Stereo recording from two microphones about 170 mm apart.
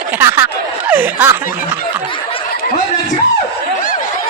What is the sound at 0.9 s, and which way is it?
Speech, 10° right (ahead or behind).